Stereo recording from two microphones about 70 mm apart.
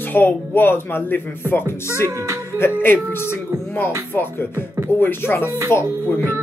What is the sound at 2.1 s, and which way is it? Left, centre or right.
Music, right.